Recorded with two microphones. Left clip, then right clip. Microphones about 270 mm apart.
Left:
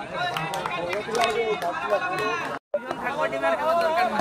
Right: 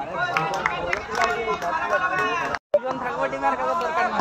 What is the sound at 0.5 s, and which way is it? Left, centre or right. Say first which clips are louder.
Speech: right 3 dB; left.